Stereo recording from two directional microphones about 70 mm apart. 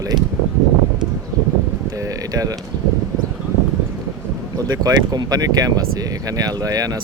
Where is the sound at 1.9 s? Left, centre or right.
Right.